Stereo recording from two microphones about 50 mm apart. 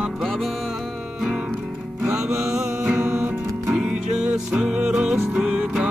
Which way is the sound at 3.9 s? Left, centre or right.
Right.